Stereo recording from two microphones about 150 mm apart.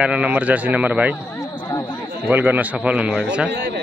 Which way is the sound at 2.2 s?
10° right (ahead or behind).